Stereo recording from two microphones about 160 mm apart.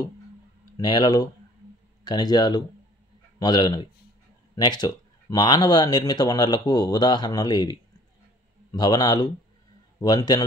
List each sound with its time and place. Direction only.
0.7 s speech: 25° left (ahead or behind)
8.7 s speech: 25° left (ahead or behind)